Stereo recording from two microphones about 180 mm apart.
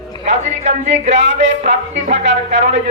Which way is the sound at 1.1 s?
85° right.